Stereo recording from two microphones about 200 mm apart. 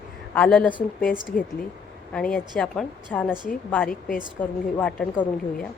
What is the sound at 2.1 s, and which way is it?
Speech, 5° left (ahead or behind).